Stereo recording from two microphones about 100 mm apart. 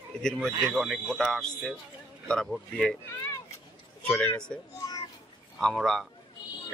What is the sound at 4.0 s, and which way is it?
Speech, 15° left (ahead or behind).